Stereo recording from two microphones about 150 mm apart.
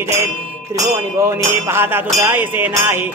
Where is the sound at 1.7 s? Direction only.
15° right (ahead or behind).